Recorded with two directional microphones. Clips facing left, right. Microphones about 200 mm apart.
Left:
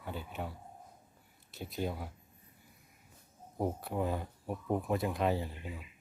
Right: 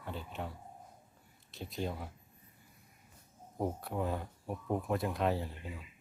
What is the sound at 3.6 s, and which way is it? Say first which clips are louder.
Speech: left 1 dB; 5° left (ahead or behind).